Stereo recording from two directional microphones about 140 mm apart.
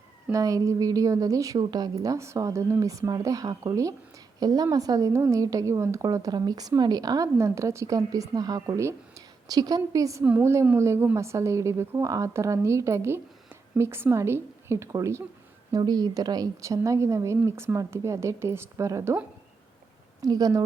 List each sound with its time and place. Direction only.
0.3 s a woman's voice: 25° right (ahead or behind)
20.2 s a woman's voice: 25° right (ahead or behind)